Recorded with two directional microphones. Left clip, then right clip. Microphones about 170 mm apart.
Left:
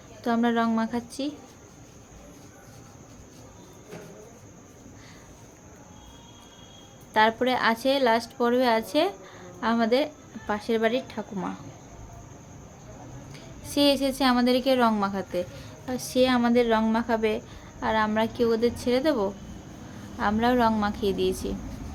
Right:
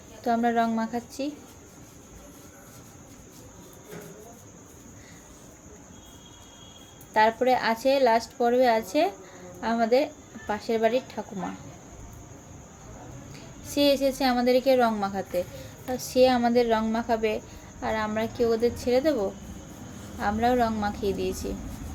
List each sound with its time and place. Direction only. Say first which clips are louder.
0.2 s speech: right 1 dB; 25° left (ahead or behind)
7.1 s a woman's voice: right 1 dB; 25° left (ahead or behind)
13.3 s a woman's voice: left 1 dB; 25° left (ahead or behind)